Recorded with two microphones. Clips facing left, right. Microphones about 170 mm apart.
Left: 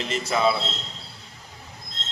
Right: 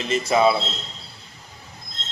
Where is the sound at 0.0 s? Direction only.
20° right (ahead or behind).